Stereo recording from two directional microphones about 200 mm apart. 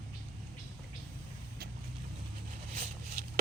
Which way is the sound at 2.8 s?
45° right (ahead or behind).